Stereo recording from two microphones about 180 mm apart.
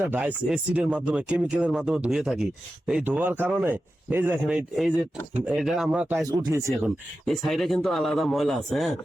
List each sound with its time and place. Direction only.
0.1 s speech: 10° right (ahead or behind)
6.2 s speech: 20° right (ahead or behind)
6.8 s speech: centre (ahead or behind)